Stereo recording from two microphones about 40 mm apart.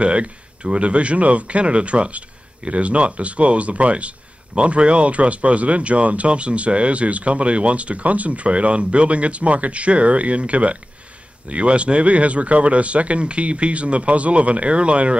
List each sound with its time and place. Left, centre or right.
0.0 s speech: right